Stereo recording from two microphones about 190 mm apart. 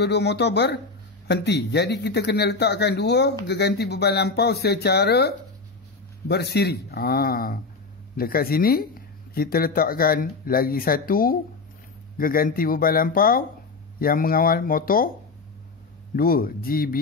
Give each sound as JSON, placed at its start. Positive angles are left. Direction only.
{"t": 0.0, "sound": "speech", "side_deg": 60}
{"t": 16.2, "sound": "speech", "side_deg": 50}